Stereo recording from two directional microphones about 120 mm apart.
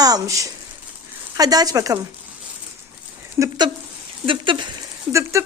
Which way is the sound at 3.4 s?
35° right (ahead or behind).